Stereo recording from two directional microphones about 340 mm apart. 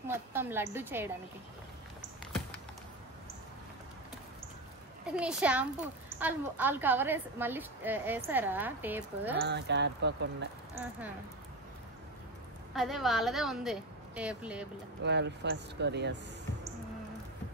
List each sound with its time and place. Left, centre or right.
0.1 s a woman's voice: centre
5.0 s a woman's voice: centre
9.4 s speech: right
10.7 s speech: centre
12.7 s a woman's voice: centre
15.0 s speech: right